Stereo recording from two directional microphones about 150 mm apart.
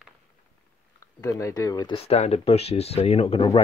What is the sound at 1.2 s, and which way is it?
Speech, 20° left (ahead or behind).